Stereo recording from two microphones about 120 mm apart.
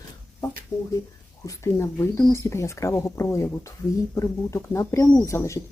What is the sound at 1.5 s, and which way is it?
Speech, 25° left (ahead or behind).